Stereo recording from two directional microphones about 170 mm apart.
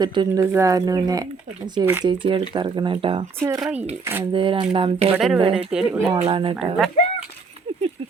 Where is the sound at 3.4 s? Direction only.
15° right (ahead or behind).